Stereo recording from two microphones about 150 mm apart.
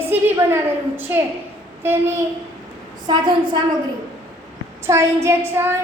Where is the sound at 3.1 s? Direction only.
30° right (ahead or behind).